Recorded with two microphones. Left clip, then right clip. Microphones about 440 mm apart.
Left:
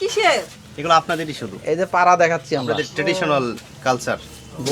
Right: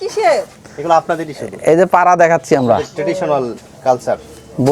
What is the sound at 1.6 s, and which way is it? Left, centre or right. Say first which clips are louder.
Speech: right 6 dB; right.